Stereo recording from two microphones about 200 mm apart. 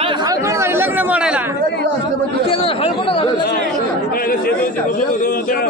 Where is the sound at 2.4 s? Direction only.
25° left (ahead or behind).